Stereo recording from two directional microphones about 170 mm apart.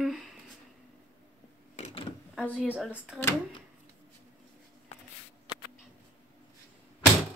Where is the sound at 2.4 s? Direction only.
5° right (ahead or behind).